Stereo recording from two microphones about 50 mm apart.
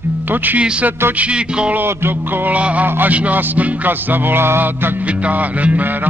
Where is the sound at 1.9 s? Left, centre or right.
Right.